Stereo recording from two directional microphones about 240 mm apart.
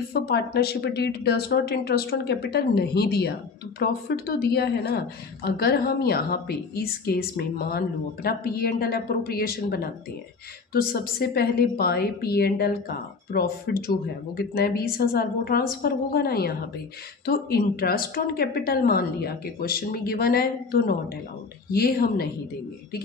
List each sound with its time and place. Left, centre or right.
0.1 s a woman's voice: left